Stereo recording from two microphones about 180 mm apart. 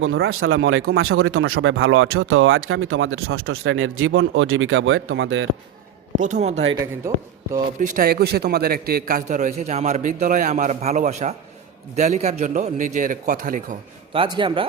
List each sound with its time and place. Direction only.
0.0 s speech: 90° right
6.1 s a man's voice: 45° right (ahead or behind)
7.1 s a man's voice: 15° right (ahead or behind)
7.8 s a man's voice: 50° right (ahead or behind)
14.1 s speech: 30° right (ahead or behind)